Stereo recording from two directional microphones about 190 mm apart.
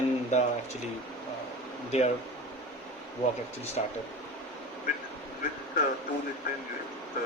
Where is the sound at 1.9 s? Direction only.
35° left (ahead or behind).